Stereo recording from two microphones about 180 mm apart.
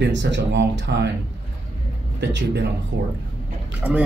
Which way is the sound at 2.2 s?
75° right (ahead or behind).